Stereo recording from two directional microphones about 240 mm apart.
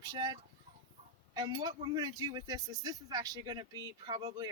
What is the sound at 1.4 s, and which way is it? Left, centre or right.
Speech, centre.